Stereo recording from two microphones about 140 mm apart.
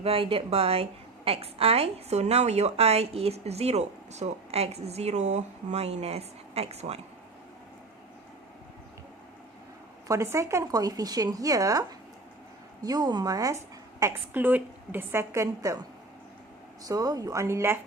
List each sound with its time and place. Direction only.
0.0 s a woman's voice: 40° right (ahead or behind)
10.1 s a woman's voice: 20° right (ahead or behind)
14.0 s a woman's voice: 15° right (ahead or behind)